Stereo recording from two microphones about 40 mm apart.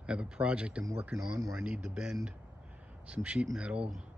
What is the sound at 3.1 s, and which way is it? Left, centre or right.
Speech, right.